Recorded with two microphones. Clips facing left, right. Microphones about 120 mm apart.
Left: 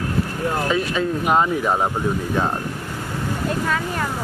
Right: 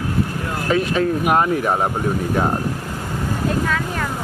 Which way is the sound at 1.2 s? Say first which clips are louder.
Right 1 dB; 10° right (ahead or behind).